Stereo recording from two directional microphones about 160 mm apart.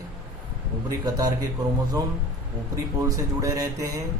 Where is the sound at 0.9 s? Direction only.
25° right (ahead or behind).